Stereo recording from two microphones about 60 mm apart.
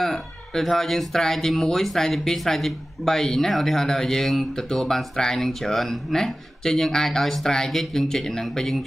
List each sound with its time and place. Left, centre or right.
0.0 s speech: centre